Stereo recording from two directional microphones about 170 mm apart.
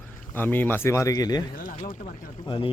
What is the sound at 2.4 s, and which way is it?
Speech, 30° left (ahead or behind).